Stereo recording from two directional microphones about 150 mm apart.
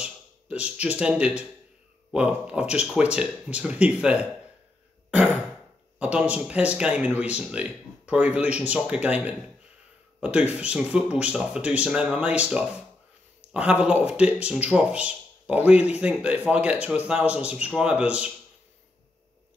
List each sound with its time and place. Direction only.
0.0 s speech: 10° right (ahead or behind)
5.9 s speech: 10° right (ahead or behind)